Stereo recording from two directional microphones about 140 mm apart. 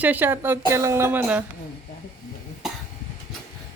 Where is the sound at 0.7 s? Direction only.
20° right (ahead or behind).